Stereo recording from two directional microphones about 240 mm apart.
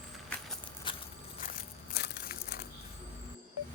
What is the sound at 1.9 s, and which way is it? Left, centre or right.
Crumpling, left.